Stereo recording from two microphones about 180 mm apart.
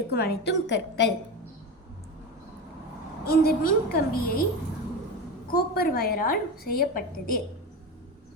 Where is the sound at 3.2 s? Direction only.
55° left (ahead or behind).